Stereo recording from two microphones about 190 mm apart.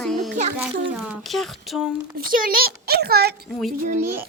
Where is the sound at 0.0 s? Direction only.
Centre (ahead or behind).